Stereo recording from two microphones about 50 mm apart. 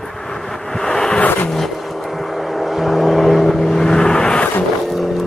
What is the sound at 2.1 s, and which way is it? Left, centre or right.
Vehicle, centre.